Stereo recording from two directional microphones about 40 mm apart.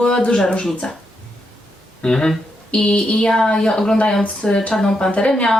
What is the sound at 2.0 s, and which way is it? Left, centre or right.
Speech, centre.